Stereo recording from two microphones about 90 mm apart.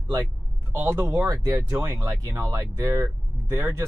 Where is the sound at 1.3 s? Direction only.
40° right (ahead or behind).